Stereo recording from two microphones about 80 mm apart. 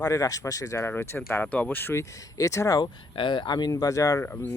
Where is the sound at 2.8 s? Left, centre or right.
Left.